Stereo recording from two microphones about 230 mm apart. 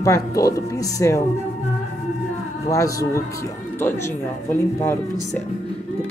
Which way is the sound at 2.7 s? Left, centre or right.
Centre.